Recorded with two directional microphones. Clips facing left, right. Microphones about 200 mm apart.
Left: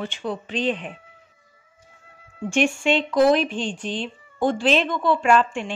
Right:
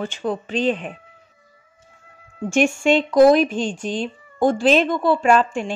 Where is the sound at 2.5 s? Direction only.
45° right (ahead or behind).